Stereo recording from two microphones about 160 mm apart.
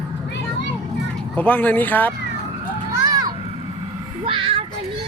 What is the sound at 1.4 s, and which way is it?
Speech, 10° left (ahead or behind).